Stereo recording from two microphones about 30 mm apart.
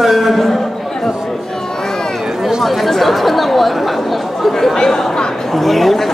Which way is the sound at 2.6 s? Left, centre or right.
Centre.